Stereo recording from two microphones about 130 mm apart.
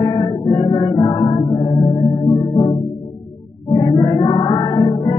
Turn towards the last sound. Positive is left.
turn(degrees=35)  # may be behind; listen again after turning